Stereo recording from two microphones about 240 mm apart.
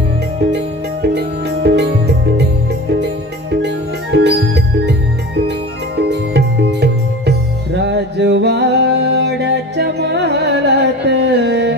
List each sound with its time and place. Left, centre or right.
1.1 s music: right
3.6 s music: right
6.0 s music: right